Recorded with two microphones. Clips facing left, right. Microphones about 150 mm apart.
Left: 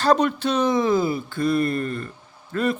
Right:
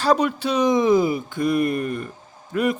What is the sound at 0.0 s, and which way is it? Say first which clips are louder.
Speech: even; 10° right (ahead or behind).